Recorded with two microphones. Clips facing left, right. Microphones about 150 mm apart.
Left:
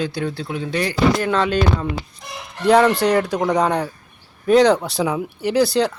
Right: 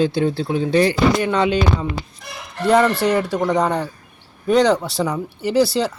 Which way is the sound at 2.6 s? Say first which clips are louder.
Left 1 dB; centre (ahead or behind).